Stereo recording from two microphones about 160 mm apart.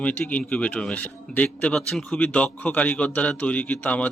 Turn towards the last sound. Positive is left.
turn(degrees=10)  # may be behind; listen again after turning